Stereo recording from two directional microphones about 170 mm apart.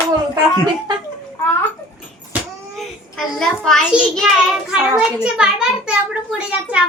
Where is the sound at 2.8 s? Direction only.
Centre (ahead or behind).